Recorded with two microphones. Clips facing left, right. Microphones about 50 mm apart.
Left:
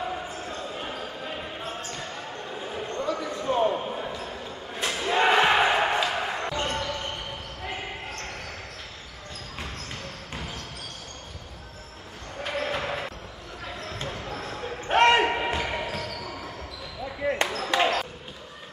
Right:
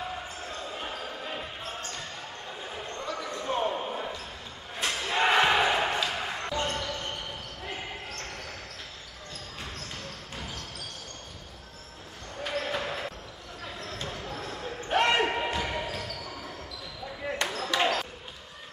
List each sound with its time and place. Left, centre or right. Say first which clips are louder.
2.9 s basketball bounce: left 6 dB; centre
10.3 s basketball bounce: left 3 dB; left
12.4 s a sound: left 2 dB; left
13.8 s basketball bounce: left 2 dB; left
14.9 s basketball bounce: left 6 dB; left
15.1 s a sound: left 3 dB; left
15.6 s basketball bounce: left 3 dB; centre